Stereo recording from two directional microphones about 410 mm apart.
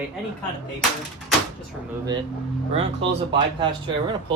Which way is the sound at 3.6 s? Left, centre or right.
Centre.